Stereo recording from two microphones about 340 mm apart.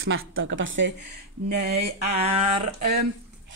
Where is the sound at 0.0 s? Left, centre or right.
Right.